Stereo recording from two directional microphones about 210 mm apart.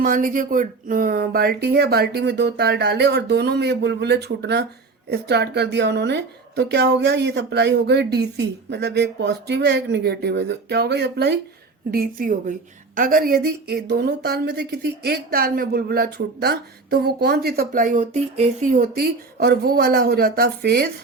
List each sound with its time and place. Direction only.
0.0 s a woman's voice: 40° right (ahead or behind)